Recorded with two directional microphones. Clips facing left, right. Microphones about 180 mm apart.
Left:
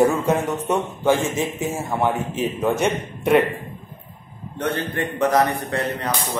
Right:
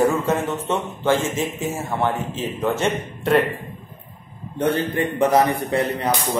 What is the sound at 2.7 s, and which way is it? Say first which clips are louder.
Speech: left 1 dB; 15° left (ahead or behind).